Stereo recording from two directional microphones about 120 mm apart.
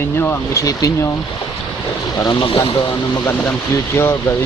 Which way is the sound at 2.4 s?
45° left (ahead or behind).